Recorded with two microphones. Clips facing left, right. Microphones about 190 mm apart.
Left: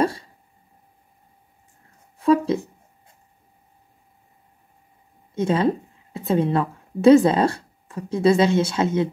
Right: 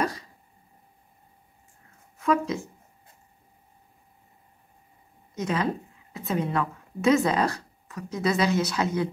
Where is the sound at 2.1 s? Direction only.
30° left (ahead or behind).